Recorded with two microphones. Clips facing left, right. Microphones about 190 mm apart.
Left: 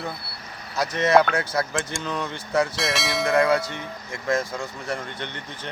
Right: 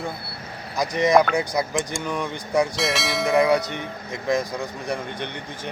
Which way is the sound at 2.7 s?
Centre (ahead or behind).